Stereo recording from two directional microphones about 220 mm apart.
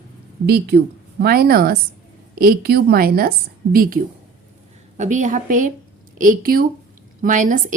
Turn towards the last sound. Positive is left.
turn(degrees=-35)  # may be behind; listen again after turning